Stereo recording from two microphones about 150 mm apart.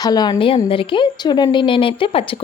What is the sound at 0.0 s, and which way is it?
Speech, 25° left (ahead or behind).